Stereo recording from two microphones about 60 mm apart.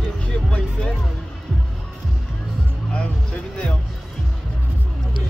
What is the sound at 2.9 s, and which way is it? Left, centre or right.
Speech, left.